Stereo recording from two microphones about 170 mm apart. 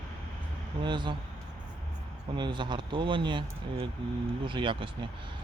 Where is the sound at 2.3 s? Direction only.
25° right (ahead or behind).